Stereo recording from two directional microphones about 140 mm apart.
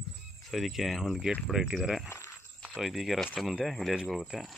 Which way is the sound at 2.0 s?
20° left (ahead or behind).